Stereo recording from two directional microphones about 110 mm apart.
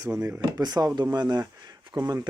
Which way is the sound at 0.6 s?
35° right (ahead or behind).